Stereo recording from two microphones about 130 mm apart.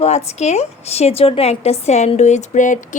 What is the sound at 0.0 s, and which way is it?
A woman's voice, 55° left (ahead or behind).